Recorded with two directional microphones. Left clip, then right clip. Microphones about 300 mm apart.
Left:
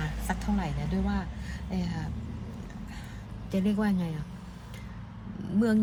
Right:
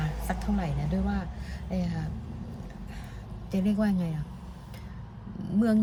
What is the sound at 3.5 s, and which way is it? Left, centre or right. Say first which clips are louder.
Speech: right 1 dB; centre.